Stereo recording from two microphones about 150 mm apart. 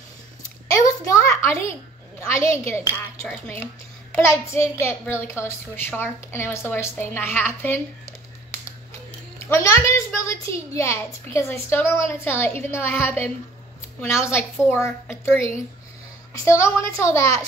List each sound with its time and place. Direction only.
0.8 s a sound: 20° left (ahead or behind)
2.3 s a child's voice: 20° left (ahead or behind)
9.5 s a child's voice: 20° left (ahead or behind)